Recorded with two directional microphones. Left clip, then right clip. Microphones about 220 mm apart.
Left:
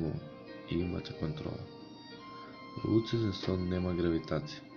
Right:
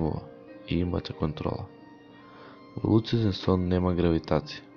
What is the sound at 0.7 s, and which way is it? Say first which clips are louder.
Speech: right 6 dB; 35° right (ahead or behind).